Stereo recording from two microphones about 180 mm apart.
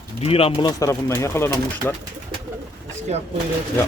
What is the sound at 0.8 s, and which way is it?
Speech, 15° left (ahead or behind).